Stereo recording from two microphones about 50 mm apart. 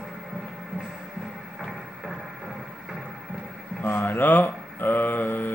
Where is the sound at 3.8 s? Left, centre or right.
Left.